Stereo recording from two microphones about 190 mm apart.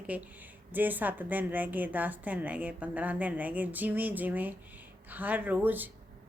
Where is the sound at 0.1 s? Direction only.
5° right (ahead or behind).